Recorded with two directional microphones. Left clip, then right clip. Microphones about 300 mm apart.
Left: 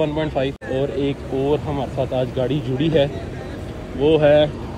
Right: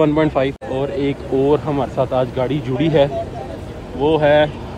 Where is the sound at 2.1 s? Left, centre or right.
Centre.